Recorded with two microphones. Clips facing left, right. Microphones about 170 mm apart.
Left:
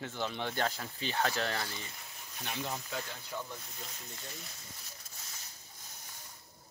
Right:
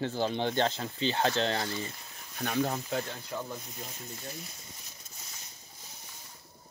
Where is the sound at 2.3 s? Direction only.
60° right (ahead or behind).